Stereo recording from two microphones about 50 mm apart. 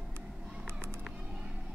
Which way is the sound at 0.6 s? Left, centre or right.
Right.